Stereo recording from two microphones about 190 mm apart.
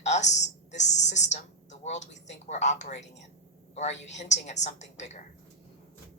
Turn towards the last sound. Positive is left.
turn(degrees=35)  # may be behind; listen again after turning